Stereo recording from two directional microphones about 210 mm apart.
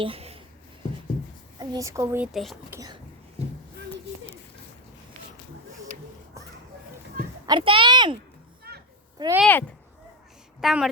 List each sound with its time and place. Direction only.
0.0 s writing: 25° right (ahead or behind)
1.5 s a woman's voice: 15° right (ahead or behind); by 2.6 s centre (ahead or behind)
2.6 s speech: 15° right (ahead or behind)
7.4 s speech: 25° right (ahead or behind)
8.7 s children playing: 50° right (ahead or behind)
9.1 s speech: 15° right (ahead or behind)
9.4 s a woman's voice: 10° left (ahead or behind)